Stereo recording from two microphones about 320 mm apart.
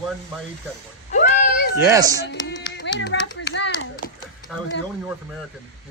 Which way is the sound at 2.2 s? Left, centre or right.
Left.